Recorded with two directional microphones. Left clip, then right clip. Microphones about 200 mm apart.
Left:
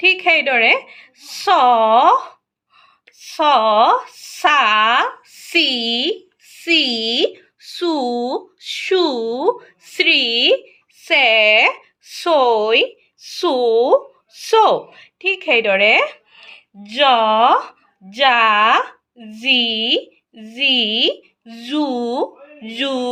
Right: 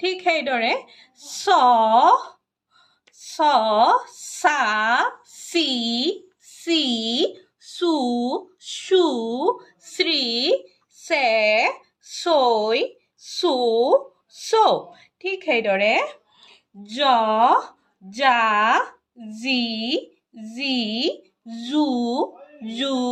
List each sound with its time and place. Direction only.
0.0 s a woman's voice: centre (ahead or behind)
3.2 s a woman's voice: centre (ahead or behind)
11.7 s a sound: 70° left (ahead or behind)
12.2 s a woman's voice: 5° left (ahead or behind)